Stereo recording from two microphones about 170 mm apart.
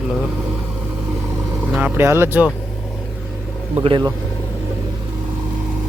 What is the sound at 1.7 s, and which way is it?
Speech, 10° right (ahead or behind).